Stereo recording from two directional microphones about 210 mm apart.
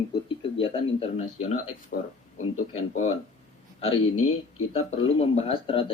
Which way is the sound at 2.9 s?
30° left (ahead or behind).